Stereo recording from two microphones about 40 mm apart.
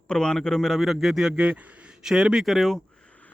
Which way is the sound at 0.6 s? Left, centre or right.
Centre.